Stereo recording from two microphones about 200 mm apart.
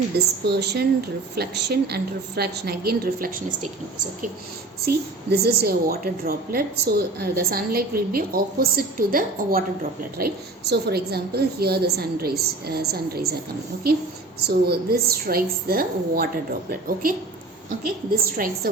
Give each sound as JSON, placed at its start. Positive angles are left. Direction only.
{"t": 0.4, "sound": "a woman's voice", "side_deg": -55}
{"t": 5.3, "sound": "a woman's voice", "side_deg": -50}
{"t": 14.3, "sound": "a woman's voice", "side_deg": -50}